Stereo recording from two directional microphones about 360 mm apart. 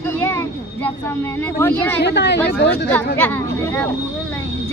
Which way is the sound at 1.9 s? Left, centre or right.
Left.